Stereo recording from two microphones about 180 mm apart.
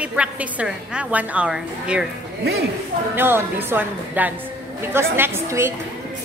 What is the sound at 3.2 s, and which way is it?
A woman's voice, 10° right (ahead or behind).